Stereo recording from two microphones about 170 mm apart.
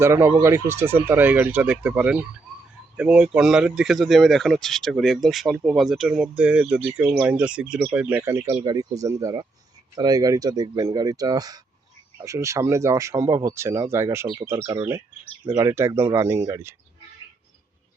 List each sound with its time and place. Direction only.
0.0 s speech: 15° right (ahead or behind)